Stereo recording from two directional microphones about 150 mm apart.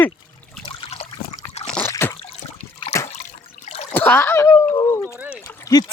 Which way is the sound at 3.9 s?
10° left (ahead or behind).